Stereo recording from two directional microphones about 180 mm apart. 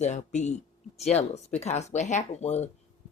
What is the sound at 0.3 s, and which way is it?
Speech, 40° left (ahead or behind).